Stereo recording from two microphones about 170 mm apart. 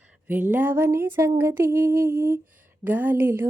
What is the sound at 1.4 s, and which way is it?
Child singing, 15° right (ahead or behind).